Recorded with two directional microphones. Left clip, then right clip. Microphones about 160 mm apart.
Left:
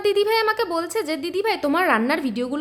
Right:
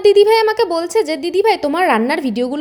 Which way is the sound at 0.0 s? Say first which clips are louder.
Right 9 dB; 25° right (ahead or behind).